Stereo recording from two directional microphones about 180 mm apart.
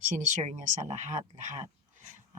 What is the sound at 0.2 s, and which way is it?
Speech, 45° right (ahead or behind).